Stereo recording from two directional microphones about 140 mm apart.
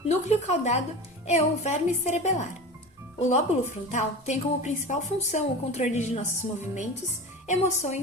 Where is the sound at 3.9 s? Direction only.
55° left (ahead or behind).